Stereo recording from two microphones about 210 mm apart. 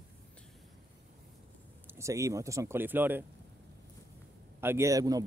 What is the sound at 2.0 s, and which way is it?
Speech, 15° right (ahead or behind).